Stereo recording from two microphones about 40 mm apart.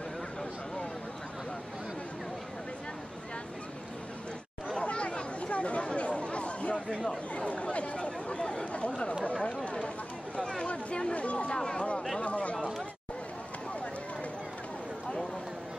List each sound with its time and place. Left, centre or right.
4.8 s chatter: left
6.9 s speech: centre
7.3 s chatter: left
10.6 s chatter: left
11.6 s a sound: left